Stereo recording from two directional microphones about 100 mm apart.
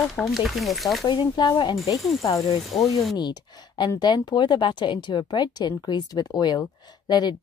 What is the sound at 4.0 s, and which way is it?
Speech, 45° left (ahead or behind).